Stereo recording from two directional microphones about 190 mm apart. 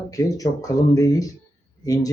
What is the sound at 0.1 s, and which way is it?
Speech, 20° left (ahead or behind).